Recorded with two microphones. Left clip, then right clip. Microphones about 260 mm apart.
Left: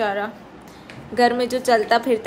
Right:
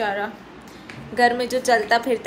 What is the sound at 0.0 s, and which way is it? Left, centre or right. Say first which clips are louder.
A woman's voice: left 1 dB; centre.